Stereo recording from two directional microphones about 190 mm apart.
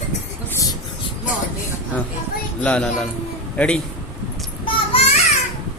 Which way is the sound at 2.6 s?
5° left (ahead or behind).